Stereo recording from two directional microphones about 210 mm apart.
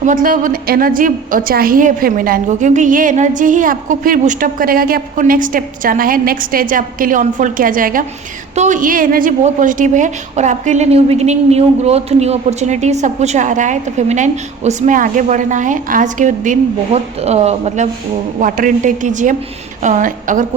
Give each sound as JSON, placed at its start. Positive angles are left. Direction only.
{"t": 0.0, "sound": "a woman's voice", "side_deg": -40}
{"t": 18.3, "sound": "a woman's voice", "side_deg": -40}